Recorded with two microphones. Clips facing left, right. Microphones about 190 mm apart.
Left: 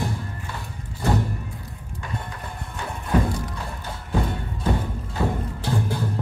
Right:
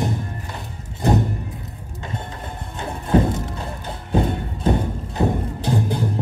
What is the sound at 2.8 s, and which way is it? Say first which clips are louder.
Music: right 5 dB; 25° right (ahead or behind).